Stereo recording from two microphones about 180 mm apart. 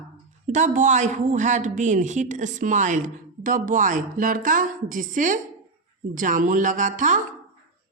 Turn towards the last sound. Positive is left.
turn(degrees=-45)  # may be behind; listen again after turning